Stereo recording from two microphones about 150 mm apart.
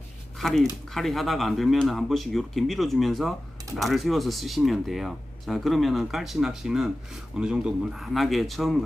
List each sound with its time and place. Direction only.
0.3 s speech: centre (ahead or behind)